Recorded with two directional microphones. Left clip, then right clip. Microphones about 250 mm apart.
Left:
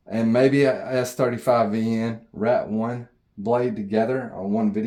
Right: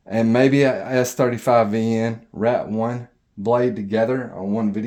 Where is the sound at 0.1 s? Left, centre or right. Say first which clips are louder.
Right 2 dB; right.